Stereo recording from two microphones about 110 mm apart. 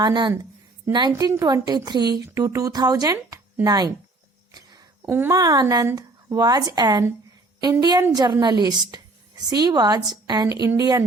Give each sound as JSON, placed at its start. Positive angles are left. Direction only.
{"t": 0.0, "sound": "a woman's voice", "side_deg": -45}
{"t": 4.5, "sound": "a sound", "side_deg": -35}
{"t": 5.0, "sound": "speech", "side_deg": -20}
{"t": 5.3, "sound": "a woman's voice", "side_deg": -35}